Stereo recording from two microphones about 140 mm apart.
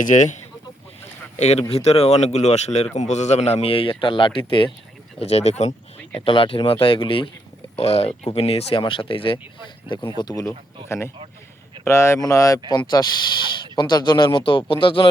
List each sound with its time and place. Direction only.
0.0 s speech: 65° left (ahead or behind)
1.4 s a man's voice: 50° left (ahead or behind)
5.2 s a man's voice: 50° left (ahead or behind)
6.1 s a man's voice: 40° left (ahead or behind)
10.2 s speech: 25° left (ahead or behind)